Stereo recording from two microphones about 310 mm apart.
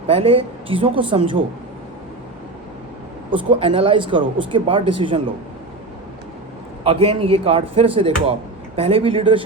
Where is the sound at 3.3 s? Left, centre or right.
Centre.